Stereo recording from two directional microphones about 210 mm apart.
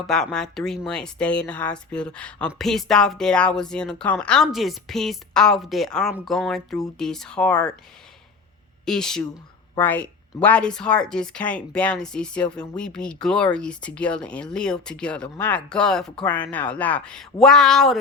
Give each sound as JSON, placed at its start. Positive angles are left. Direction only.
{"t": 0.1, "sound": "speech", "side_deg": 5}
{"t": 8.8, "sound": "speech", "side_deg": 5}